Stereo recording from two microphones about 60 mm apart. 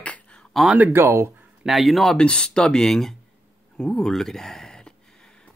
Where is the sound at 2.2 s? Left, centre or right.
Centre.